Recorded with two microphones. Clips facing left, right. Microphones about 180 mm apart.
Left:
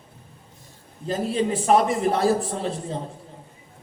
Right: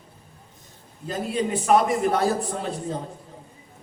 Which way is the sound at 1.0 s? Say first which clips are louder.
Left 2 dB; 30° left (ahead or behind).